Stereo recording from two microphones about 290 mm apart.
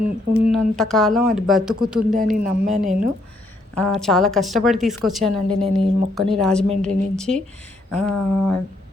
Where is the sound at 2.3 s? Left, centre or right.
Right.